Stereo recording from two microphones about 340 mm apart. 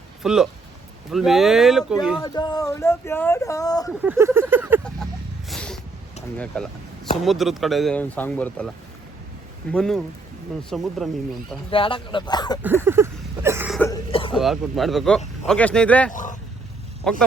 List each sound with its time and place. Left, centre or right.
0.2 s speech: centre
2.2 s speech: centre
4.0 s a sound: centre
6.3 s speech: centre
9.7 s speech: centre
11.7 s speech: centre
12.8 s a sound: centre
14.3 s speech: centre
16.1 s vehicle: left
17.0 s speech: centre